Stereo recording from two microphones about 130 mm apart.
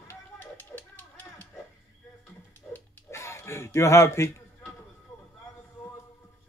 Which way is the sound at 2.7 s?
20° left (ahead or behind).